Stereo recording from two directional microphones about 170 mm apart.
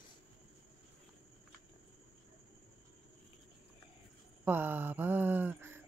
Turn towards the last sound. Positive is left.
turn(degrees=-10)  # may be behind; listen again after turning